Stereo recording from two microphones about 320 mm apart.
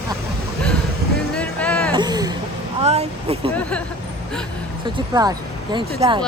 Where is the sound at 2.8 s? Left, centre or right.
Centre.